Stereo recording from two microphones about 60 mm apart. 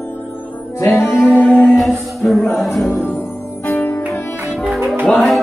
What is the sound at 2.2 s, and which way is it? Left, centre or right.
Music, centre.